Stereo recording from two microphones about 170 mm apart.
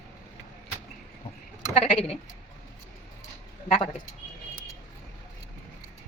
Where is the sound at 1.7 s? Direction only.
35° left (ahead or behind).